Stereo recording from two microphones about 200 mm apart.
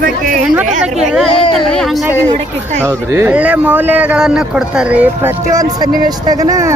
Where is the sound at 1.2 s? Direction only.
25° left (ahead or behind).